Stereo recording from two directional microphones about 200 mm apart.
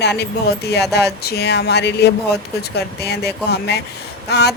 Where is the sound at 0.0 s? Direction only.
55° left (ahead or behind).